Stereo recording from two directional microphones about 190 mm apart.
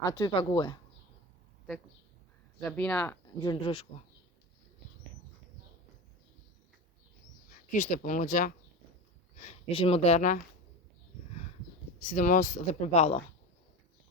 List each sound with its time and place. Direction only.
0.0 s speech: 20° left (ahead or behind)
2.6 s speech: 5° left (ahead or behind)
3.4 s speech: 25° left (ahead or behind)
7.7 s speech: 40° left (ahead or behind)
9.4 s speech: 30° left (ahead or behind)
12.0 s speech: 40° left (ahead or behind)